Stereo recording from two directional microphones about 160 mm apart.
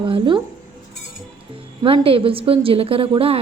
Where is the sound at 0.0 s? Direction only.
30° right (ahead or behind).